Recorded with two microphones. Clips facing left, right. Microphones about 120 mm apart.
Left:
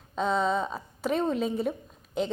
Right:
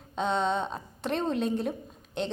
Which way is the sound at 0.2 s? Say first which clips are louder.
Left 1 dB; centre (ahead or behind).